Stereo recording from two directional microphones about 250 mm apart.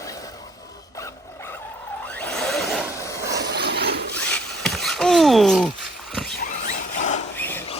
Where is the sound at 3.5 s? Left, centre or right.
Right.